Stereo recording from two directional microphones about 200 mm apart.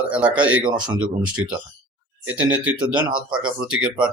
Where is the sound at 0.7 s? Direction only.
20° right (ahead or behind).